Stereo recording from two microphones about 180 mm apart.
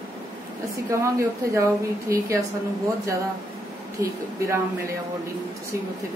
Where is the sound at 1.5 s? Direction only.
15° right (ahead or behind).